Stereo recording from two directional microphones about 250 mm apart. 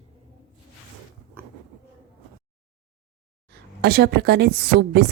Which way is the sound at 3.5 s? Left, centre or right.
Right.